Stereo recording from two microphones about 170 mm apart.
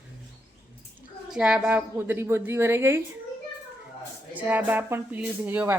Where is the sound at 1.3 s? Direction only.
5° right (ahead or behind).